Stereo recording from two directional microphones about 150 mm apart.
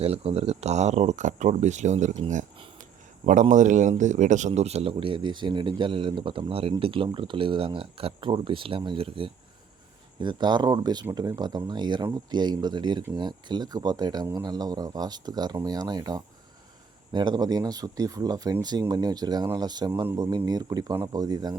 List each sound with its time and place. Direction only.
0.0 s speech: 40° right (ahead or behind)
3.5 s speech: 55° right (ahead or behind); by 21.5 s 25° right (ahead or behind)